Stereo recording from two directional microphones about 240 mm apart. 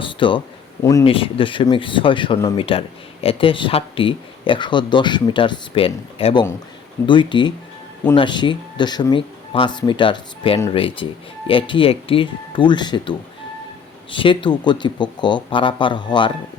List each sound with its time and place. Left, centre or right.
0.0 s speech: left